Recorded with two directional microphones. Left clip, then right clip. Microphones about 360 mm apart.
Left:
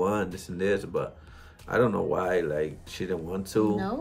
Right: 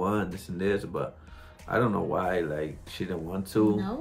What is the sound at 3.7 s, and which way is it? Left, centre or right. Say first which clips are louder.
Speech: left 1 dB; centre.